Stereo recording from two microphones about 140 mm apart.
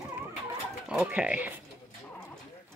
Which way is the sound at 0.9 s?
5° right (ahead or behind).